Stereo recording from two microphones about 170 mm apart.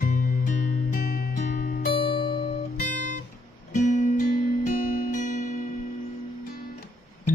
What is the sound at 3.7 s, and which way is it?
Music, 45° left (ahead or behind).